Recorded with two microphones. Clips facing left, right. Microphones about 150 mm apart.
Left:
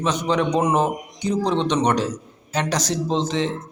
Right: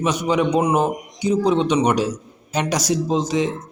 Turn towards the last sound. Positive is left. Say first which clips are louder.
# right 2 dB
turn(degrees=-10)  # may be behind; listen again after turning